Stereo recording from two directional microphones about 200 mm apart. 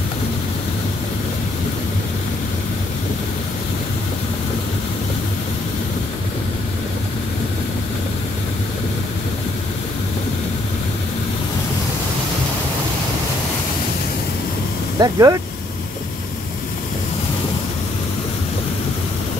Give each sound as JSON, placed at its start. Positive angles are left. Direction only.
{"t": 15.0, "sound": "speech", "side_deg": -15}